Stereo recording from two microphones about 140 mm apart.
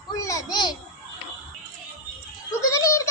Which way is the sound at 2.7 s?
20° left (ahead or behind).